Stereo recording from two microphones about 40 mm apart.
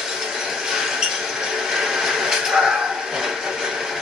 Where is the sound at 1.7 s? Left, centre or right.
Centre.